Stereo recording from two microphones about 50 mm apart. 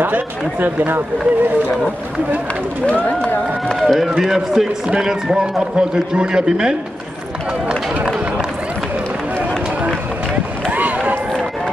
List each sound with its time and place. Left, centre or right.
0.0 s speech: right
2.9 s speech: left
3.8 s a man's voice: centre
10.7 s a sound: right